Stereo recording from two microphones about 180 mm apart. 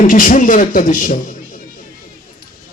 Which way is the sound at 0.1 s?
45° left (ahead or behind).